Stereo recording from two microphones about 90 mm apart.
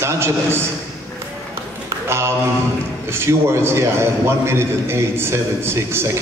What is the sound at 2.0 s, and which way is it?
A man's voice, 30° right (ahead or behind).